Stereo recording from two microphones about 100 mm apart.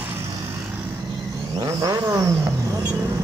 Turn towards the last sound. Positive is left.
turn(degrees=-35)  # may be behind; listen again after turning